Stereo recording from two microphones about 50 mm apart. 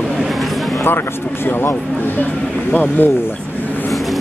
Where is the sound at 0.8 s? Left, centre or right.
Left.